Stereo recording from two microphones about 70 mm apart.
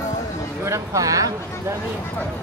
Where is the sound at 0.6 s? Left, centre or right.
Right.